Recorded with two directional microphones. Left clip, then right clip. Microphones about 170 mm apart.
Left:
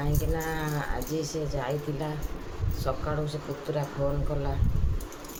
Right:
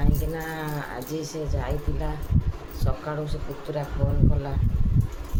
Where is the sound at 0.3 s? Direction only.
Centre (ahead or behind).